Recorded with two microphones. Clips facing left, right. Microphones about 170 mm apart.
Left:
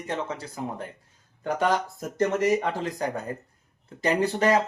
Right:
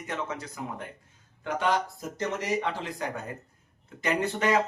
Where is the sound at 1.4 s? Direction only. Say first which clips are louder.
Left 3 dB; 45° left (ahead or behind).